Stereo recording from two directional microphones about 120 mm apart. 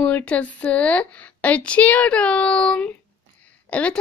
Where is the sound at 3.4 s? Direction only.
10° left (ahead or behind).